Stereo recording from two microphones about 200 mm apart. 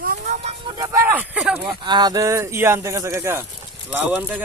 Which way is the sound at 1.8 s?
20° right (ahead or behind).